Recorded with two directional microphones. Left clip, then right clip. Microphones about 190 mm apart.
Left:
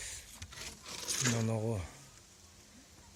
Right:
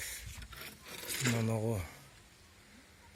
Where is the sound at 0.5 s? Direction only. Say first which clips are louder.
Left 3 dB; 50° right (ahead or behind).